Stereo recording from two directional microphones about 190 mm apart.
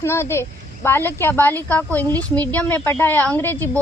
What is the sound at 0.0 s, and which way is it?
Speech, 15° left (ahead or behind).